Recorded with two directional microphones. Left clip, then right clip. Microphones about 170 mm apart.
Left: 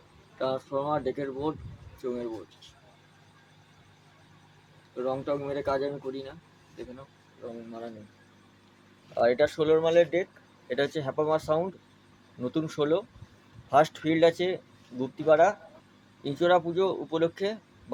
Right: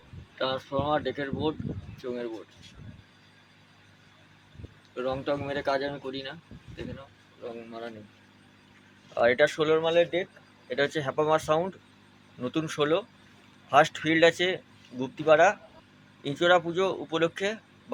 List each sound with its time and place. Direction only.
0.3 s speech: 10° left (ahead or behind)
4.9 s speech: 5° left (ahead or behind)
9.1 s speech: 5° left (ahead or behind)
9.7 s speech: 25° left (ahead or behind)
10.7 s speech: 10° left (ahead or behind)